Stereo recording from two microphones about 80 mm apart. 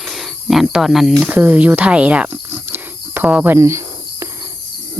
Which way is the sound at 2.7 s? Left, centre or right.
Right.